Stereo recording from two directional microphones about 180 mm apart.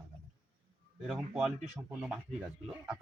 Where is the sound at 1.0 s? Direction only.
Centre (ahead or behind).